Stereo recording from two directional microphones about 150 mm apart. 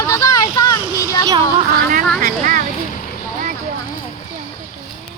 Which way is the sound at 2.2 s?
65° right (ahead or behind).